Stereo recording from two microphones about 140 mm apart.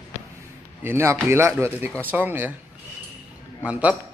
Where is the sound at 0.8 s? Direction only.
15° right (ahead or behind).